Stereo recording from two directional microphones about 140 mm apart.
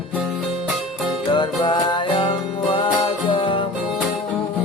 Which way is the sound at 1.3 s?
35° left (ahead or behind).